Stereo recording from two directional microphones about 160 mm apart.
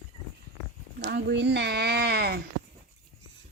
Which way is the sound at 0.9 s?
90° right.